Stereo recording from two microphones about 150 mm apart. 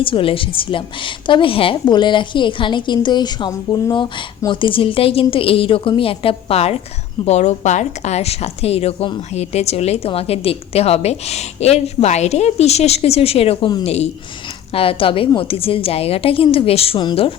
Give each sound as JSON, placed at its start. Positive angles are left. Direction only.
{"t": 0.0, "sound": "a woman's voice", "side_deg": 35}